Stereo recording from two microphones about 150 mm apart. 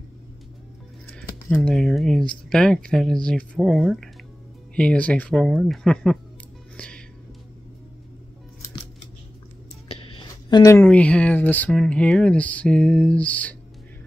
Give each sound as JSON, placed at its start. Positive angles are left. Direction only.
{"t": 1.1, "sound": "speech", "side_deg": 5}
{"t": 6.8, "sound": "music", "side_deg": 10}
{"t": 9.8, "sound": "music", "side_deg": 35}
{"t": 10.8, "sound": "speech", "side_deg": 10}